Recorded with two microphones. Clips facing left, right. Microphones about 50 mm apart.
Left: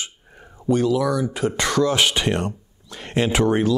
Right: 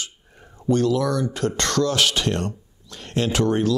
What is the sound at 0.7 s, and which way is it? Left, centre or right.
Speech, centre.